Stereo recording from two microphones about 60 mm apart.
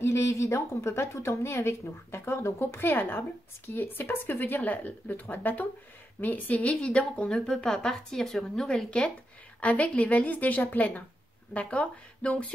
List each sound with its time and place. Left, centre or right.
0.0 s a woman's voice: left; by 9.1 s centre
9.6 s a woman's voice: left